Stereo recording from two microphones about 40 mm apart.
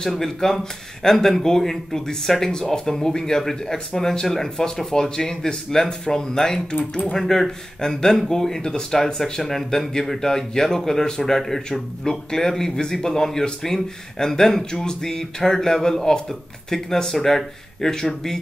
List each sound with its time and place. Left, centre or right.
0.0 s speech: centre
6.7 s speech: left
7.1 s speech: centre